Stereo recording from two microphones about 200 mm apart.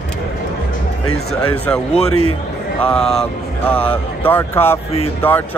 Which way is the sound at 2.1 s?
90° left.